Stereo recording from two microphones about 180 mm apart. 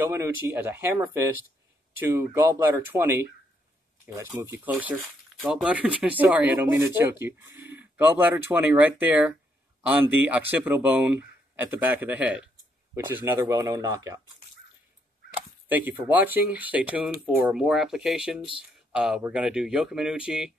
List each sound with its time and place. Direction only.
0.0 s speech: 15° right (ahead or behind)
15.7 s speech: 10° right (ahead or behind)